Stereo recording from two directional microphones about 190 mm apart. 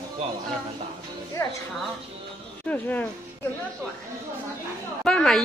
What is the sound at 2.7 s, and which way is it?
Speech, 10° left (ahead or behind).